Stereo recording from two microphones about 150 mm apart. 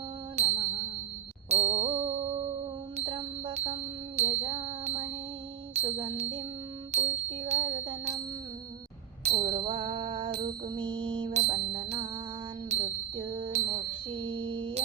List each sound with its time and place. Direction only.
0.3 s music: 40° right (ahead or behind)
9.2 s music: 45° right (ahead or behind)
9.5 s music: 35° right (ahead or behind)
14.1 s a sound: 35° right (ahead or behind)